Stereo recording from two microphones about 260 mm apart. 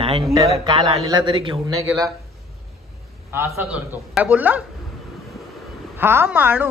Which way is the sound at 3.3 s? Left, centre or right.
Centre.